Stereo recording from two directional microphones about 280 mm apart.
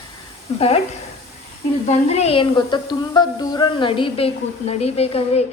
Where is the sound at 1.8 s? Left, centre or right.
Left.